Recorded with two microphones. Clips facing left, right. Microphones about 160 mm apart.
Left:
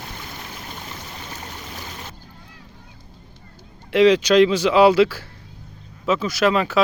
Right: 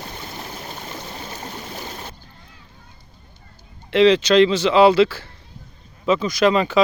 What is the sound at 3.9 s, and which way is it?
Speech, 10° left (ahead or behind).